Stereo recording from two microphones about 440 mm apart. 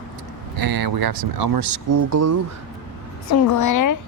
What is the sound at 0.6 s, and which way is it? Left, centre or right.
Speech, right.